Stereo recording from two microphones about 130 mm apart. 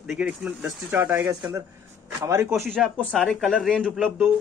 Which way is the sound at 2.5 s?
Centre (ahead or behind).